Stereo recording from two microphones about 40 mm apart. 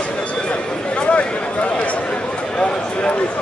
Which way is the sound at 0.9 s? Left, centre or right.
Left.